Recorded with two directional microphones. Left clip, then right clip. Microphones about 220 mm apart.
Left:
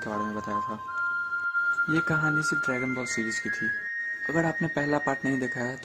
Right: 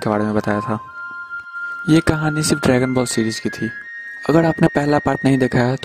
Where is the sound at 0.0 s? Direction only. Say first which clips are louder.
Right 12 dB; 40° right (ahead or behind).